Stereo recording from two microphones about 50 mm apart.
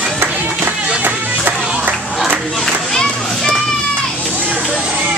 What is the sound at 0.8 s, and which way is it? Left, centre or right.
Music, right.